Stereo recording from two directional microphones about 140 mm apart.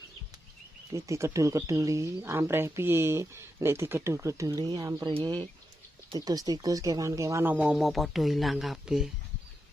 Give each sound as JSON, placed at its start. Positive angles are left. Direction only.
{"t": 0.9, "sound": "speech", "side_deg": -20}